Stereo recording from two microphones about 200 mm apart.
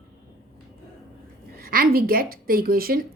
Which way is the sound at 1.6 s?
45° right (ahead or behind).